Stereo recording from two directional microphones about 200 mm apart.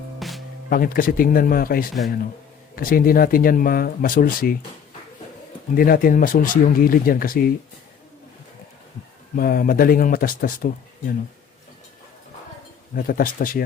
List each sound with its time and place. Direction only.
0.2 s music: centre (ahead or behind)
0.7 s speech: 45° left (ahead or behind)
5.7 s speech: 45° left (ahead or behind)
9.3 s speech: 45° left (ahead or behind)
12.9 s speech: 45° left (ahead or behind)